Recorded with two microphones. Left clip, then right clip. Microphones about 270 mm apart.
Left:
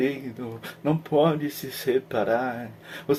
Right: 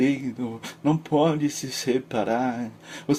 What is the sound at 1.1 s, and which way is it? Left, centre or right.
Speech, right.